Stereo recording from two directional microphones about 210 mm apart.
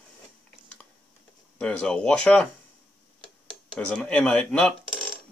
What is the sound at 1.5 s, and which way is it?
Speech, 5° left (ahead or behind).